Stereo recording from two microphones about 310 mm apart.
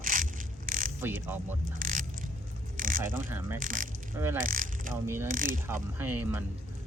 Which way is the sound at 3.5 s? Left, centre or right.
Right.